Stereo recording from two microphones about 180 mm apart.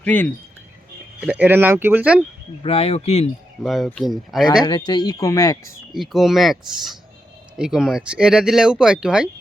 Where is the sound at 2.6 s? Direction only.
35° left (ahead or behind).